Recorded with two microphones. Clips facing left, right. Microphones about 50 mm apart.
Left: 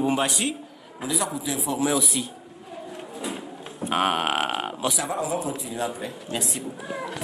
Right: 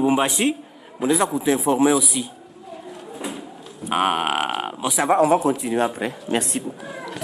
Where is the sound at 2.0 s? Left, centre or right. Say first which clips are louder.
Right 2 dB; centre.